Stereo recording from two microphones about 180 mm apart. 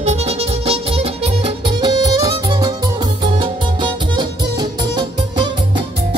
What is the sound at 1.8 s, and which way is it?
Music, 20° right (ahead or behind).